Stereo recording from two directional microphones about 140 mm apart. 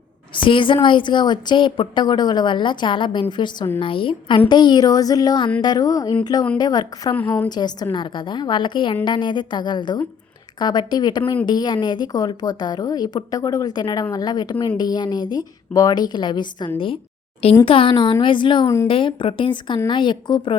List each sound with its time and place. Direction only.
0.4 s a woman's voice: 35° left (ahead or behind)